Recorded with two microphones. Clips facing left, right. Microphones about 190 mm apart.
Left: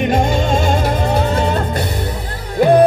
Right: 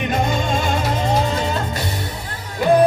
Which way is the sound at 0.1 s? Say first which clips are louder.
Left 5 dB; 50° left (ahead or behind).